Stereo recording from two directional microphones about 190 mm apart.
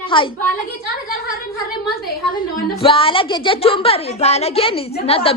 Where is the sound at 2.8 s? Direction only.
30° left (ahead or behind).